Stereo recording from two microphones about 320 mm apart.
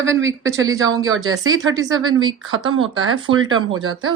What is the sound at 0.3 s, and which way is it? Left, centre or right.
Speech, centre.